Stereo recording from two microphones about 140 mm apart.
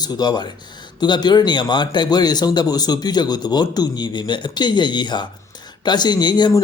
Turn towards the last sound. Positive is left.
turn(degrees=25)  # may be behind; listen again after turning